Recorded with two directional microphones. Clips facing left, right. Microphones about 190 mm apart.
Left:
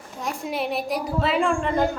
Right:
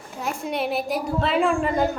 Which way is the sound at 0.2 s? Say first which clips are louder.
Right 1 dB; centre (ahead or behind).